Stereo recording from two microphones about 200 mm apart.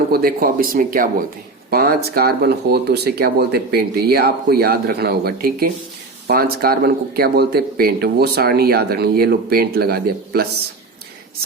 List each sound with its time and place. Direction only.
0.1 s speech: 50° right (ahead or behind)